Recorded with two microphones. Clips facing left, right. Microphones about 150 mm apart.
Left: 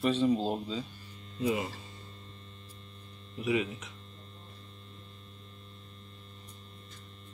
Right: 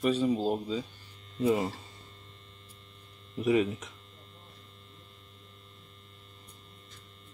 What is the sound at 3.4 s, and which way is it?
Speech, 45° right (ahead or behind).